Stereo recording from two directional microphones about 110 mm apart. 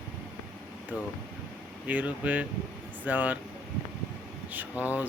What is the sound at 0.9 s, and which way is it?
Speech, 15° right (ahead or behind).